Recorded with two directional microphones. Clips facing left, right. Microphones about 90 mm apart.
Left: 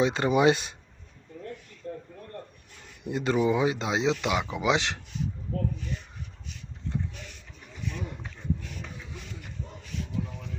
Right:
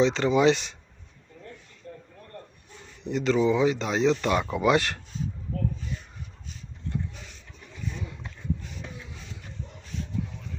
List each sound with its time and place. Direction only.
0.0 s speech: 15° left (ahead or behind)
3.0 s speech: 15° left (ahead or behind)